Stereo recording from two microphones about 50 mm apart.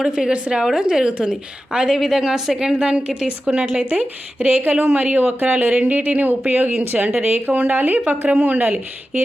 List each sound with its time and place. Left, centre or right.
0.0 s a woman's voice: centre
3.8 s speech: right